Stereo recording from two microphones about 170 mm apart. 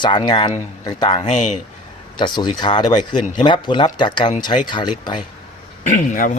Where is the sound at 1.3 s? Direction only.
45° left (ahead or behind).